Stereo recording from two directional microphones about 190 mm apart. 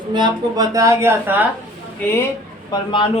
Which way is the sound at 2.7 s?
25° left (ahead or behind).